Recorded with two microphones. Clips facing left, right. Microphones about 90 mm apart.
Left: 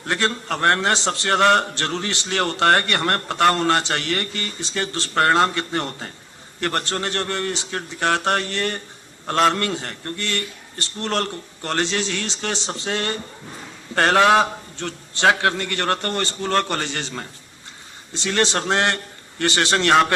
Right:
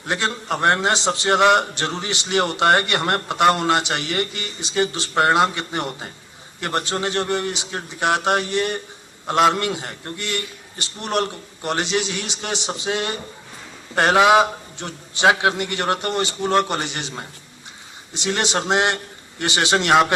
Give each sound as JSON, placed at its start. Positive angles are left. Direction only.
{"t": 0.1, "sound": "a man's voice", "side_deg": -20}